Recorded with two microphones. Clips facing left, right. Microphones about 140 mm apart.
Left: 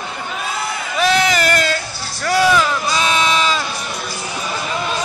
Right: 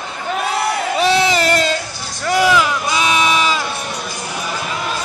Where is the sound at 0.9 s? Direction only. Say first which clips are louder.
Even; 30° right (ahead or behind).